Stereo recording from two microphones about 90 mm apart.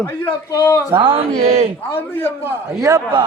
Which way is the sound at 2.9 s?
40° right (ahead or behind).